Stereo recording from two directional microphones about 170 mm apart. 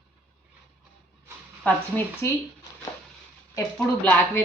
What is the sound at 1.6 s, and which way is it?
Speech, 10° left (ahead or behind).